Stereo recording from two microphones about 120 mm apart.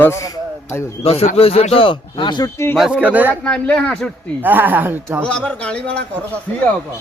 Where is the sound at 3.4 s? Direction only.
10° left (ahead or behind).